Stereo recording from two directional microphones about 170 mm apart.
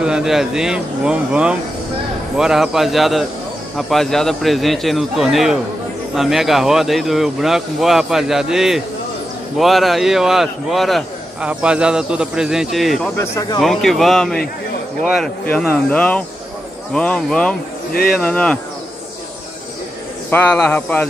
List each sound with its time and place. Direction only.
0.0 s a man's voice: 5° right (ahead or behind)
13.2 s speech: 20° left (ahead or behind)
13.6 s a man's voice: centre (ahead or behind)
20.2 s a man's voice: 10° left (ahead or behind)